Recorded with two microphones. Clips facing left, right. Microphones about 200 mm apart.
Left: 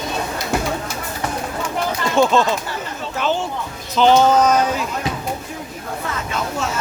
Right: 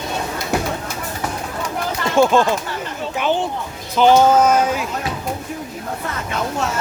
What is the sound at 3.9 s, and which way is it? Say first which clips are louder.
Music: right 1 dB; 10° right (ahead or behind).